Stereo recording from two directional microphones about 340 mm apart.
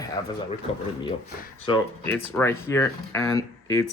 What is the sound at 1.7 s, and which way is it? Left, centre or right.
Speech, centre.